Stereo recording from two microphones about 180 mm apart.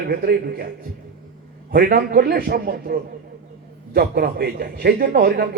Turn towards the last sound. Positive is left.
turn(degrees=-60)  # may be behind; listen again after turning